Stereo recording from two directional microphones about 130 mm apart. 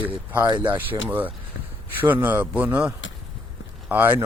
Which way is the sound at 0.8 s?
15° right (ahead or behind).